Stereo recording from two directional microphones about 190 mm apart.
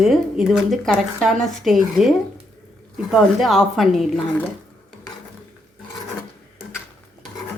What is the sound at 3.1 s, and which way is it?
Speech, centre (ahead or behind).